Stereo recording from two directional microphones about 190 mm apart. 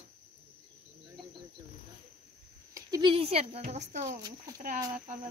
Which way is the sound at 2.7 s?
20° right (ahead or behind).